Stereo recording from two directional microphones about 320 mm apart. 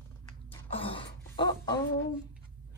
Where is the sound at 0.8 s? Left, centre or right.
Centre.